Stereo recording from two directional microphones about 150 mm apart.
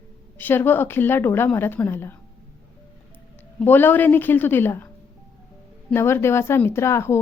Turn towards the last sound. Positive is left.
turn(degrees=15)  # may be behind; listen again after turning